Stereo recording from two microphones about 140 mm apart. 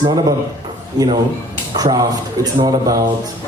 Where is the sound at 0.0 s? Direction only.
30° right (ahead or behind).